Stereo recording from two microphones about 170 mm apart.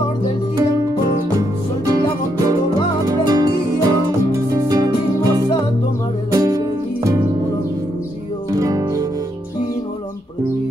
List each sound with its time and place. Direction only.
0.6 s music: 20° right (ahead or behind)
3.1 s music: 25° right (ahead or behind)
8.5 s music: 20° right (ahead or behind)